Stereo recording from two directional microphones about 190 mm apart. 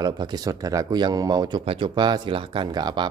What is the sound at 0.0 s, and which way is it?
Speech, 20° right (ahead or behind).